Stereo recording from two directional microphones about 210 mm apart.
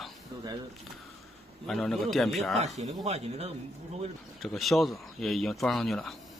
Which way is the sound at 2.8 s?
30° right (ahead or behind).